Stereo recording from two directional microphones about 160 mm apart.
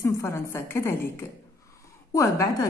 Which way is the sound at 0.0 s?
15° left (ahead or behind).